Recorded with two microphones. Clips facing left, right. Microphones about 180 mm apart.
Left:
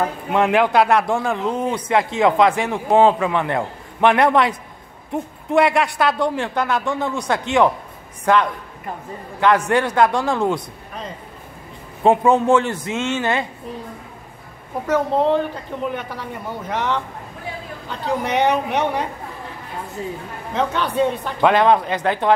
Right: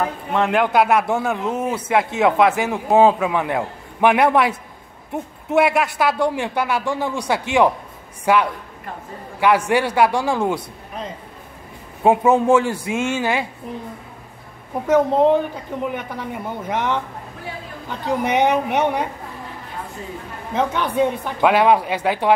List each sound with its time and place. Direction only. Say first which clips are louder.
0.3 s a man's voice: left 2 dB; 10° left (ahead or behind); by 10.6 s 10° right (ahead or behind)
12.0 s a man's voice: even; 10° right (ahead or behind)
14.9 s a man's voice: right 3 dB; 15° right (ahead or behind)
20.5 s a man's voice: even; 10° right (ahead or behind)